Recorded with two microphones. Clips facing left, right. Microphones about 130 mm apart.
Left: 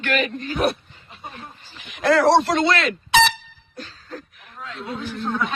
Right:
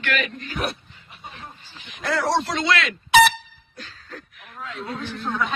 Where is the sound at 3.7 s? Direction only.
35° left (ahead or behind).